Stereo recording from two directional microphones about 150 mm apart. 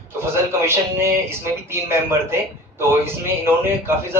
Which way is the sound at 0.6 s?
15° right (ahead or behind).